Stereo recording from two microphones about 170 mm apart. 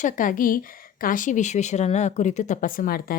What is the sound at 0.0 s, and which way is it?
A woman's voice, 50° left (ahead or behind).